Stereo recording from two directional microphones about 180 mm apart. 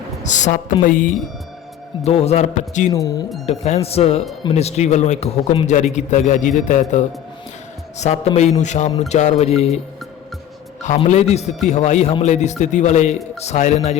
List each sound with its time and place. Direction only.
0.2 s a woman's voice: 40° left (ahead or behind)
2.0 s speech: 35° left (ahead or behind)
2.9 s speech: 20° left (ahead or behind)
3.4 s speech: 35° left (ahead or behind)
10.8 s speech: 40° left (ahead or behind)